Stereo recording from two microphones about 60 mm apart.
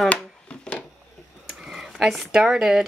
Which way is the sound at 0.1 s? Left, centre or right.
Left.